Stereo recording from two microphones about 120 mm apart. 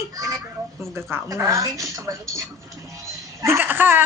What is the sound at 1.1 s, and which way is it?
A woman's voice, 25° right (ahead or behind).